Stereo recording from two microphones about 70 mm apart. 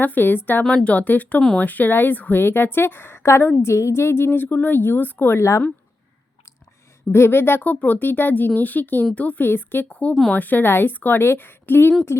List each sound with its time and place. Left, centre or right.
0.0 s speech: left
0.6 s speech: centre
0.9 s a woman's voice: left
7.1 s speech: left
9.9 s speech: centre